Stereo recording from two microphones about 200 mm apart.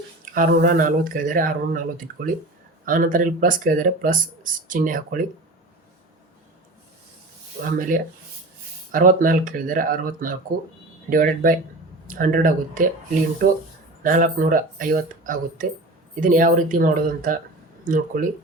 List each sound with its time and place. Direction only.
0.3 s speech: 45° right (ahead or behind)
7.6 s speech: 45° right (ahead or behind)
14.0 s speech: 45° right (ahead or behind)